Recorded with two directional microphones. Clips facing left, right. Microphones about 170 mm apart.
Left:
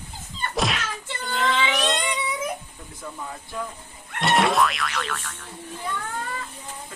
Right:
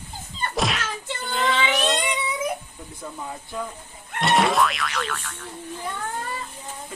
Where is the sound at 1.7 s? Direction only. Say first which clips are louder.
Right 1 dB; 10° right (ahead or behind).